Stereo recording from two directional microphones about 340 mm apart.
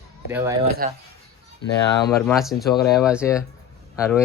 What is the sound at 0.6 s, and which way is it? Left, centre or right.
Speech, right.